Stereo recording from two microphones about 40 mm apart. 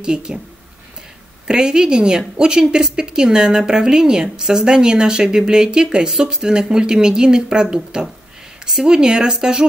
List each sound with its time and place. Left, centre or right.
0.0 s a woman's voice: right
1.5 s a woman's voice: centre